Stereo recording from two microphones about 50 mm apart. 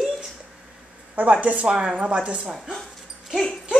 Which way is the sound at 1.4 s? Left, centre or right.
Right.